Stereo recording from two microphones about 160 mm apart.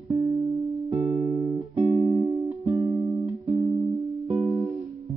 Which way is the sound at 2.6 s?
20° right (ahead or behind).